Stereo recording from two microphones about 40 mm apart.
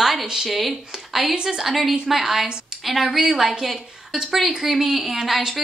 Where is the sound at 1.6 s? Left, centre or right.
Centre.